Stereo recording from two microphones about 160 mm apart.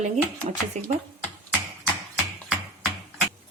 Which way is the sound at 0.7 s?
45° right (ahead or behind).